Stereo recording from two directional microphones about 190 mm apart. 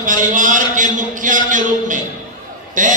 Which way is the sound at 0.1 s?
40° right (ahead or behind).